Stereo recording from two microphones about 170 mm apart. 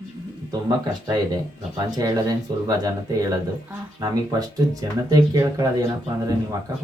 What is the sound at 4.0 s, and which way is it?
Speech, 20° right (ahead or behind).